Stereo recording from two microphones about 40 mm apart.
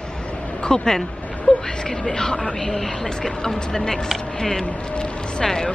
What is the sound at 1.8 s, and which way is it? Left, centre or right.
Speech, centre.